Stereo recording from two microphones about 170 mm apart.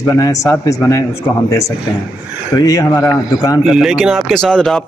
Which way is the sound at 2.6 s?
20° left (ahead or behind).